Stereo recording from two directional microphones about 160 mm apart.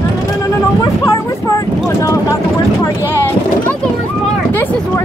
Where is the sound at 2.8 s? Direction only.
15° left (ahead or behind).